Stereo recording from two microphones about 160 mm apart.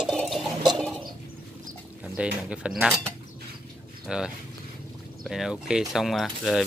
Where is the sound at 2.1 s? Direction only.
5° right (ahead or behind).